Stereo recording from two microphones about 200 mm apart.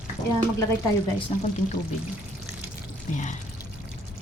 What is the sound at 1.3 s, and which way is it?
Speech, 30° left (ahead or behind).